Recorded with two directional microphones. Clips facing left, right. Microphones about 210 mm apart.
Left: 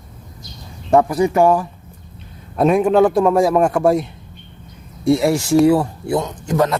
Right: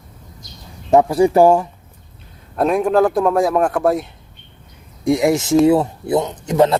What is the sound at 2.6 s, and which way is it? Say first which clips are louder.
Speech: left 2 dB; centre (ahead or behind).